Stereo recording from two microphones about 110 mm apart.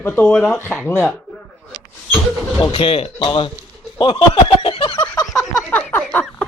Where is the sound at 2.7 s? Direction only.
60° left (ahead or behind).